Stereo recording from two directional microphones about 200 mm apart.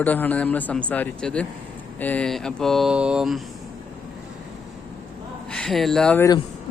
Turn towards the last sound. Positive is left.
turn(degrees=5)  # may be behind; listen again after turning